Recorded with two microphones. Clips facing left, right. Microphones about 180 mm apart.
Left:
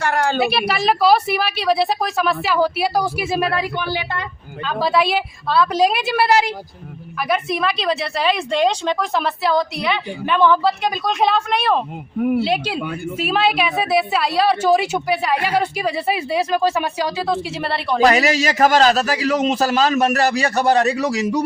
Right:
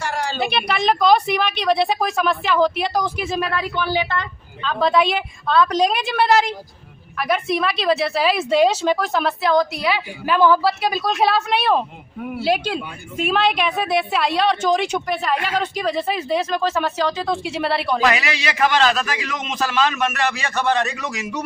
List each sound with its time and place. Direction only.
0.0 s a sound: 55° left (ahead or behind)
0.3 s a woman's voice: 5° left (ahead or behind)
18.0 s a man's voice: 40° left (ahead or behind)